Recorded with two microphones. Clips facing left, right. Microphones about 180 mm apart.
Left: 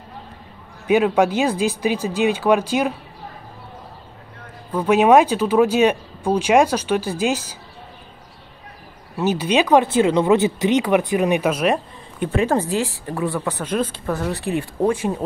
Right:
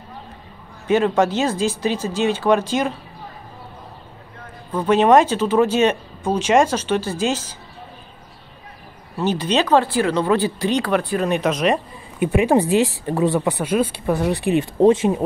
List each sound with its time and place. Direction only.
0.8 s speech: 10° left (ahead or behind)
4.7 s speech: 10° left (ahead or behind)
9.1 s speech: 10° left (ahead or behind)
12.2 s speech: 15° right (ahead or behind)